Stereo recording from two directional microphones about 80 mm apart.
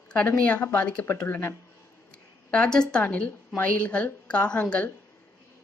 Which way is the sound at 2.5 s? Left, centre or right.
Centre.